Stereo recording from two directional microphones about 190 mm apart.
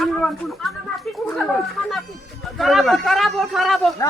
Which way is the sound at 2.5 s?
Centre (ahead or behind).